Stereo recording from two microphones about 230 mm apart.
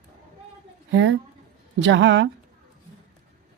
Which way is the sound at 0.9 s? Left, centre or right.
Right.